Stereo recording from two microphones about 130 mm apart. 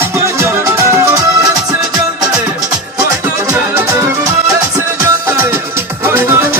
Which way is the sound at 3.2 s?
20° right (ahead or behind).